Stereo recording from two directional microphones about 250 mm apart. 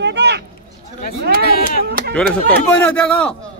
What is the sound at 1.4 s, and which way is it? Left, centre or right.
Speech, left.